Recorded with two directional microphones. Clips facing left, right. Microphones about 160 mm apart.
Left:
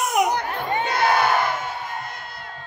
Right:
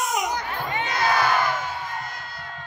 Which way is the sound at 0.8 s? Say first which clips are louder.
Left 3 dB; 60° left (ahead or behind).